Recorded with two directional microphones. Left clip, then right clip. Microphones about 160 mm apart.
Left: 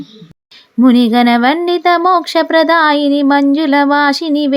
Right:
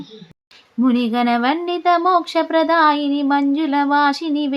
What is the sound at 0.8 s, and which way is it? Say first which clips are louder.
Speech: left 8 dB; 55° left (ahead or behind).